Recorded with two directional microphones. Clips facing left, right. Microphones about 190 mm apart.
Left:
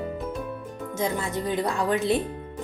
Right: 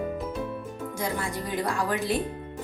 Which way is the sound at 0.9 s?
20° left (ahead or behind).